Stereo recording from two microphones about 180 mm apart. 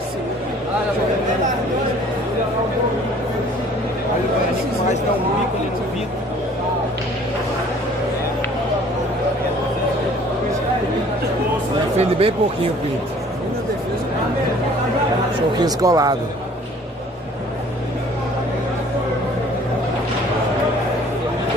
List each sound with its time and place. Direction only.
12.0 s speech: 30° right (ahead or behind)
15.6 s speech: 20° right (ahead or behind)